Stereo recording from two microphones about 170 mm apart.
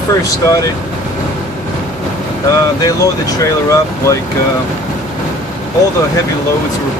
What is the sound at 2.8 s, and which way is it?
Speech, 20° left (ahead or behind).